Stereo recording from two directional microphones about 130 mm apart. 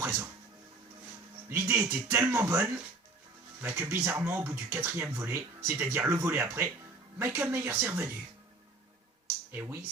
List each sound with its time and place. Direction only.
0.0 s music: 20° right (ahead or behind)
1.5 s speech: 15° right (ahead or behind)
9.5 s speech: 15° right (ahead or behind)